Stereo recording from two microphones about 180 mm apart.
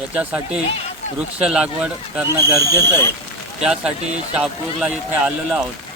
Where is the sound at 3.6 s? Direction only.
5° right (ahead or behind).